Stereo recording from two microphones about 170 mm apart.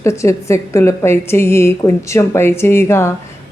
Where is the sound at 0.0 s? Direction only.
15° left (ahead or behind).